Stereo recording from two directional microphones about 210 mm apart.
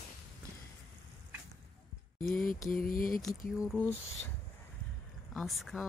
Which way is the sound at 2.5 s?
40° left (ahead or behind).